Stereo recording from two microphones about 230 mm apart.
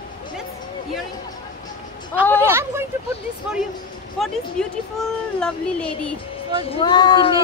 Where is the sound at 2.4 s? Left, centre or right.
Centre.